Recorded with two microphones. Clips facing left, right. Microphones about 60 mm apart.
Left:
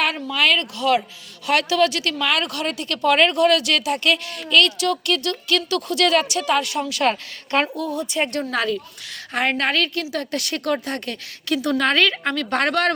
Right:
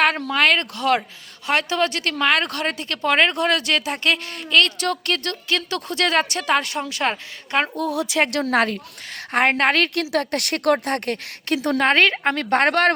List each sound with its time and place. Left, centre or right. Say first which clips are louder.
0.2 s a woman's voice: right 1 dB; right
1.5 s a woman's voice: left 2 dB; right
7.8 s speech: right 2 dB; right
8.4 s a woman's voice: right 3 dB; right
11.8 s a woman's voice: right 4 dB; right